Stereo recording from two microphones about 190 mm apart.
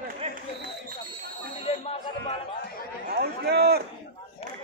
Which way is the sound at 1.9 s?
25° left (ahead or behind).